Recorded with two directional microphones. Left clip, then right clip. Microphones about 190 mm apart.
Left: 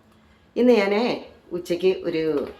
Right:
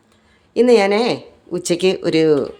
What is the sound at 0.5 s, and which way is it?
Speech, 40° right (ahead or behind).